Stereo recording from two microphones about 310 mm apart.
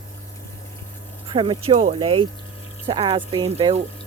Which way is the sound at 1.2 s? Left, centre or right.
Centre.